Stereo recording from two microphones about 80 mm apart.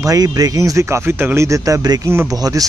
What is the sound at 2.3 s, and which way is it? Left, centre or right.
Speech, right.